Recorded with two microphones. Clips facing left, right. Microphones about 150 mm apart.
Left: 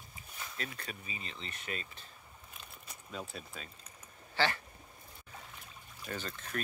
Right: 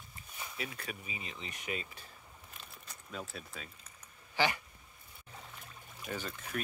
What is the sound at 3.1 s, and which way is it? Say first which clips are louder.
Speech: even; centre (ahead or behind).